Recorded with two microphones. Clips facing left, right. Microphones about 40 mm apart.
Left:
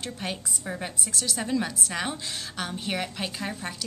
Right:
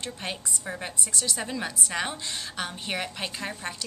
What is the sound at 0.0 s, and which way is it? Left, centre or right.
A woman's voice, centre.